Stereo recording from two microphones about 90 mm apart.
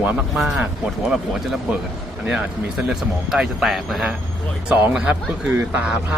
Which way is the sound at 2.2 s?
5° right (ahead or behind).